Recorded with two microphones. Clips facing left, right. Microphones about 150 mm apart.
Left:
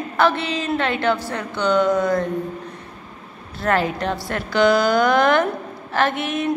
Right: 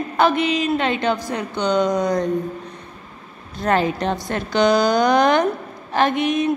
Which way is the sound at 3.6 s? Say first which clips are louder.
Right 1 dB; 20° right (ahead or behind).